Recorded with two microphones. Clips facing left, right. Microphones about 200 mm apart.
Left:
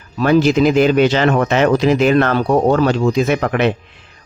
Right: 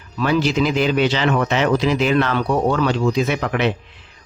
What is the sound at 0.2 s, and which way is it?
Speech, 45° left (ahead or behind).